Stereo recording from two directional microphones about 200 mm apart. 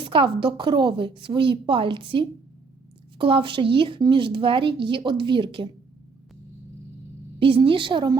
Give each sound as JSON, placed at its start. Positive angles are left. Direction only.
{"t": 0.0, "sound": "speech", "side_deg": -25}
{"t": 7.3, "sound": "speech", "side_deg": -25}